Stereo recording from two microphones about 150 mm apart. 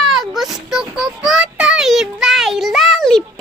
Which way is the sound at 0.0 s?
Centre (ahead or behind).